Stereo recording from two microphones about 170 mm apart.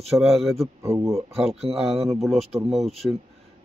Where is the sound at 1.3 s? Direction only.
35° right (ahead or behind).